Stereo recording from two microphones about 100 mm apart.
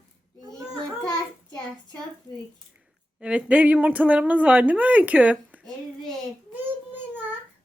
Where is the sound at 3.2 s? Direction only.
10° right (ahead or behind).